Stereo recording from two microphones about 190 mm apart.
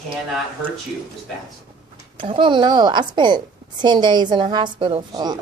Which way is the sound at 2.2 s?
25° right (ahead or behind).